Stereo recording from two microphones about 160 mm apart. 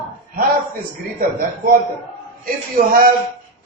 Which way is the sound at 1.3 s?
60° right (ahead or behind).